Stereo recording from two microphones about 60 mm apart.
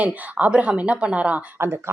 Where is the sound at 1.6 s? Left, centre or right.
Right.